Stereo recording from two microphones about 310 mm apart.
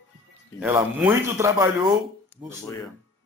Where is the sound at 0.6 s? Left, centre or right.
Centre.